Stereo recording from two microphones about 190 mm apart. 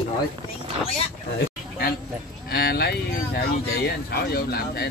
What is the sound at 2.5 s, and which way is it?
Speech, 55° left (ahead or behind).